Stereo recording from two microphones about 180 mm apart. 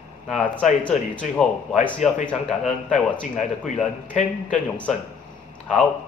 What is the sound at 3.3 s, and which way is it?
A man's voice, 45° left (ahead or behind).